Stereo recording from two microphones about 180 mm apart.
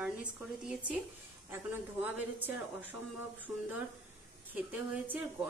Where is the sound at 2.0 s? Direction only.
10° right (ahead or behind).